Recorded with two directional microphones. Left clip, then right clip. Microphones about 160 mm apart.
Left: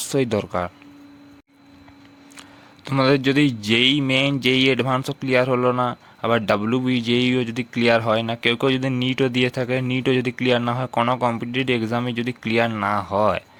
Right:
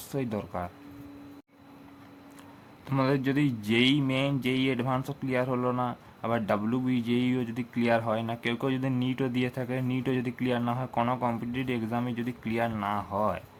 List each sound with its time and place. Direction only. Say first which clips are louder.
0.1 s a man's voice: left 11 dB; 40° left (ahead or behind)
2.8 s a man's voice: left 9 dB; 35° left (ahead or behind)